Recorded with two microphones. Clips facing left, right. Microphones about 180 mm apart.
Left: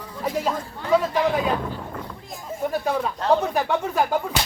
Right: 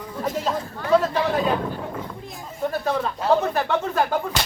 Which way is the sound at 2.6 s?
10° left (ahead or behind).